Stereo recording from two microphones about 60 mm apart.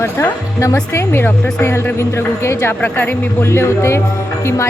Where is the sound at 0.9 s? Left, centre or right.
Left.